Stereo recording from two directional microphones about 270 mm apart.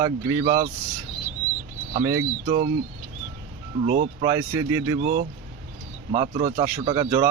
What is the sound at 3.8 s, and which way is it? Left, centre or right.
Speech, right.